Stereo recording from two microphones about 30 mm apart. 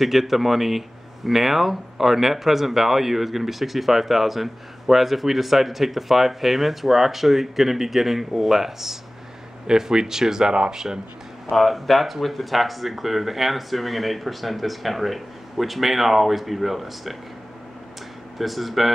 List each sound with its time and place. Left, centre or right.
0.0 s speech: centre
11.5 s speech: centre
18.4 s speech: centre